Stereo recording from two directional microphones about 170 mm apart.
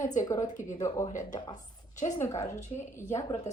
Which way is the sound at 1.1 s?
25° left (ahead or behind).